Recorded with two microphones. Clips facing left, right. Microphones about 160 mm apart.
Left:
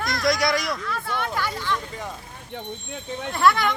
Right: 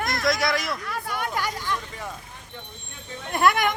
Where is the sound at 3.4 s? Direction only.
50° right (ahead or behind).